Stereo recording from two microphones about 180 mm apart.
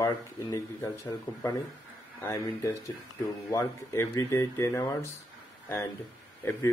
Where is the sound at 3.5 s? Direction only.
20° left (ahead or behind).